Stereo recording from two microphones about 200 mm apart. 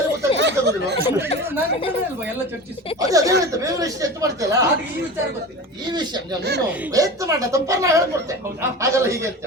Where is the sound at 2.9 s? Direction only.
15° right (ahead or behind).